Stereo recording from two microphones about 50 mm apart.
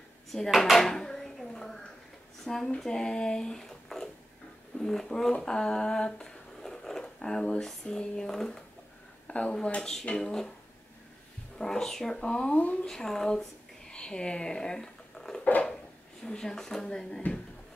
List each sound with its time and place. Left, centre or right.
0.3 s speech: centre
0.7 s a sound: centre
2.4 s speech: centre
4.7 s humming: centre
9.3 s speech: left
9.8 s speech: centre
11.5 s speech: centre
13.8 s a sound: centre
16.3 s speech: centre